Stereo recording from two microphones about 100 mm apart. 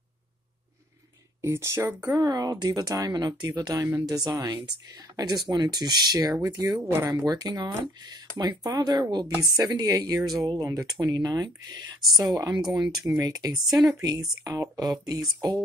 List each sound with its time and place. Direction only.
1.4 s speech: 25° right (ahead or behind)
2.1 s speech: 40° right (ahead or behind)
6.8 s speech: 25° right (ahead or behind)
13.6 s speech: centre (ahead or behind)
14.0 s speech: 40° right (ahead or behind)